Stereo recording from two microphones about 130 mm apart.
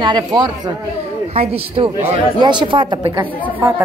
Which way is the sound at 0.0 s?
35° right (ahead or behind).